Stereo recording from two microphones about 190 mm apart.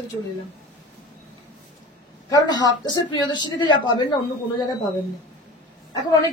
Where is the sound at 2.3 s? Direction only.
20° left (ahead or behind).